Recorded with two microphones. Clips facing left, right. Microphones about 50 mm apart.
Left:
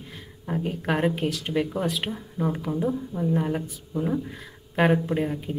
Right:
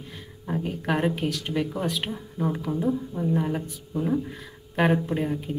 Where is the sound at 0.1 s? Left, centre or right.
Centre.